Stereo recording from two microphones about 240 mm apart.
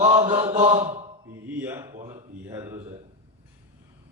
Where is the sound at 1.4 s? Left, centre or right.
Centre.